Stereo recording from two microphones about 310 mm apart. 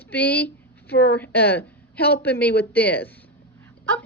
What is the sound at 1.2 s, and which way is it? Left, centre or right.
A woman's voice, centre.